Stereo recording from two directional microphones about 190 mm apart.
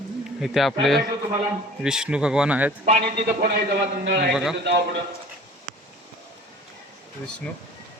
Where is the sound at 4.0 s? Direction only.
60° right (ahead or behind).